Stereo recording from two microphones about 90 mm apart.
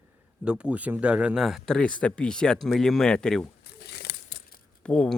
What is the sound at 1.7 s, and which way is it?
Speech, 10° left (ahead or behind).